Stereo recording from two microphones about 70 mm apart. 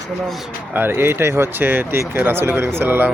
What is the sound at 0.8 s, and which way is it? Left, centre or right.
Speech, right.